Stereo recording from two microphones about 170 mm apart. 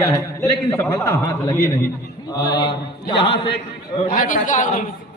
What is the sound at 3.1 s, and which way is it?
Speech, 30° left (ahead or behind).